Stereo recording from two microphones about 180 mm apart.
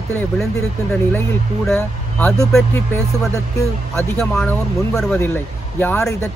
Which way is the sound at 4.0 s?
5° left (ahead or behind).